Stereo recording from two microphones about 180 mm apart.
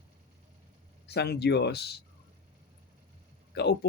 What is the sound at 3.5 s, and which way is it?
Speech, 65° left (ahead or behind).